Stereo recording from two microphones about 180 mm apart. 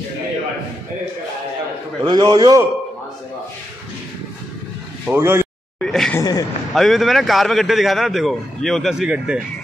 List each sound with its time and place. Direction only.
2.0 s a man's voice: 25° right (ahead or behind)
5.0 s speech: 10° right (ahead or behind)
5.8 s a sound: 5° left (ahead or behind)
6.1 s a man's voice: 20° left (ahead or behind)
6.7 s a man's voice: centre (ahead or behind)